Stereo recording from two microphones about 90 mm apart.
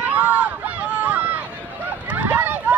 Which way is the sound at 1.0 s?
20° right (ahead or behind).